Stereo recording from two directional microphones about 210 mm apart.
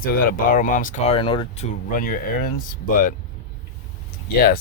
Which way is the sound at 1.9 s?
40° left (ahead or behind).